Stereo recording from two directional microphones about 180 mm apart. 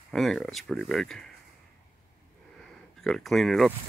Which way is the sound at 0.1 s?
Centre (ahead or behind).